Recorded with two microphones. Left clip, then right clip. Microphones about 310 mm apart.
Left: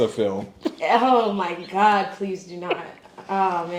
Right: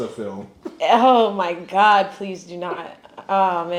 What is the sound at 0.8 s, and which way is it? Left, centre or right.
Speech, right.